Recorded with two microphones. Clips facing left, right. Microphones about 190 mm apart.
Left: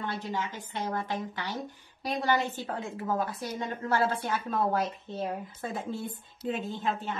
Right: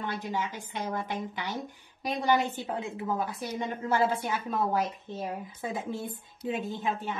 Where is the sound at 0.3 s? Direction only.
15° right (ahead or behind).